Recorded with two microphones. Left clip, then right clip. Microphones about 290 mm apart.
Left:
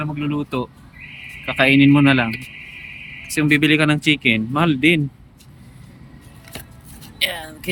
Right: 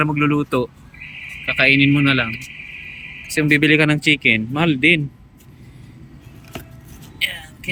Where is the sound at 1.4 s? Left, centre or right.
Centre.